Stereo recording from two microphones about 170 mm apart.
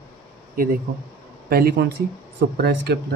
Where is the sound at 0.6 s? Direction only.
55° right (ahead or behind).